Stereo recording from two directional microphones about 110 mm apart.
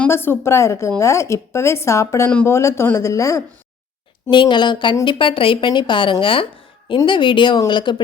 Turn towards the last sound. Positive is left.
turn(degrees=45)  # may be behind; listen again after turning